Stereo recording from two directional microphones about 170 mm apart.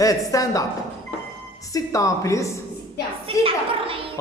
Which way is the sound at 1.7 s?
20° left (ahead or behind).